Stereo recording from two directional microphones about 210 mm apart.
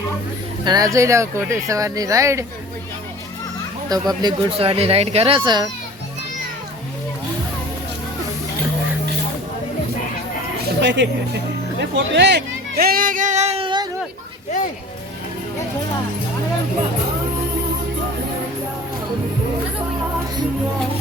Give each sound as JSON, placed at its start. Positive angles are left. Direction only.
{"t": 0.6, "sound": "speech", "side_deg": -20}
{"t": 3.8, "sound": "speech", "side_deg": -20}
{"t": 10.8, "sound": "speech", "side_deg": -55}
{"t": 11.8, "sound": "a sound", "side_deg": -55}